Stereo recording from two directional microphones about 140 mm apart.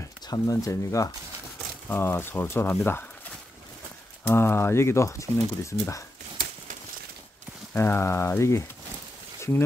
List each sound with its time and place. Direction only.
0.3 s speech: 25° left (ahead or behind)
4.3 s speech: 15° left (ahead or behind)
7.7 s speech: 15° left (ahead or behind)